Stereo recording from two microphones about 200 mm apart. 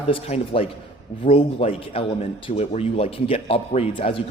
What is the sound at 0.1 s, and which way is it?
A man's voice, 30° left (ahead or behind).